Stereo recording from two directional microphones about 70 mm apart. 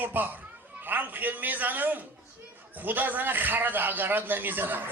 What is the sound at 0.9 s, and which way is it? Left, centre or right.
Speech, right.